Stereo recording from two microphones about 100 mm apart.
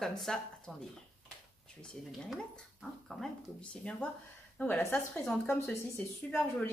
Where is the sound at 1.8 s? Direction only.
Centre (ahead or behind); by 5.2 s 20° left (ahead or behind).